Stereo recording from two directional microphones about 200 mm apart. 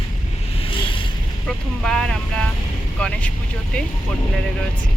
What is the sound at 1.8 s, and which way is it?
Speech, 5° left (ahead or behind).